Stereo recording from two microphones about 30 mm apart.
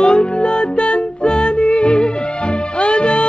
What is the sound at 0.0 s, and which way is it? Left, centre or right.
Music, left.